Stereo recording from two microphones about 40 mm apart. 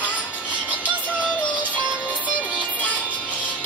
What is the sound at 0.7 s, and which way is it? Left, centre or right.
Music, right.